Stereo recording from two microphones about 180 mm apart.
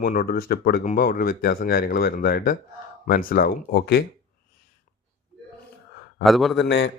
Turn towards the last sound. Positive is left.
turn(degrees=70)  # may be behind; listen again after turning